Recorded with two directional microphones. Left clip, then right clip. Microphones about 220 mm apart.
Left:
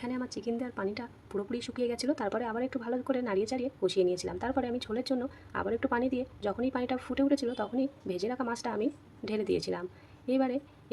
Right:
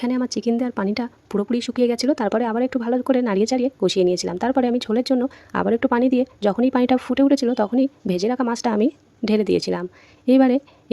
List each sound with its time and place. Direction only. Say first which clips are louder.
0.0 s speech: right 13 dB; 45° right (ahead or behind)